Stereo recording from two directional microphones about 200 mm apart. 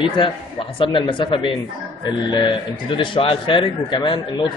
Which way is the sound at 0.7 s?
25° left (ahead or behind).